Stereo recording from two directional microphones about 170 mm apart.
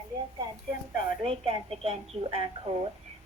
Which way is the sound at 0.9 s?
35° right (ahead or behind).